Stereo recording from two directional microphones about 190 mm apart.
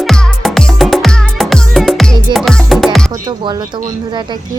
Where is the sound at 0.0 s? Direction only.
Centre (ahead or behind).